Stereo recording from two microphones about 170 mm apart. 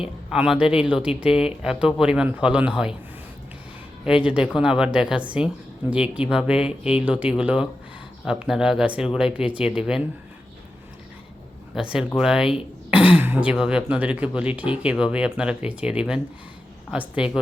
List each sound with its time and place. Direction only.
0.3 s speech: 5° right (ahead or behind)
4.0 s speech: 5° right (ahead or behind)
11.7 s speech: 5° right (ahead or behind)